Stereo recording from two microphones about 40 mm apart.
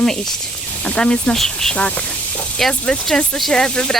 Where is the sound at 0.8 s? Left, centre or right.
Left.